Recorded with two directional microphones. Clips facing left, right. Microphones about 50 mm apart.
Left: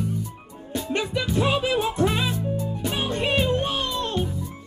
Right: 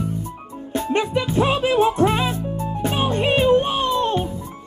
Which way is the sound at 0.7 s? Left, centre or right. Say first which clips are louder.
Right 5 dB; right.